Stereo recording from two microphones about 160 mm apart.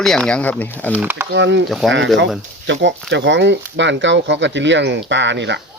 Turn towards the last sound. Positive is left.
turn(degrees=-90)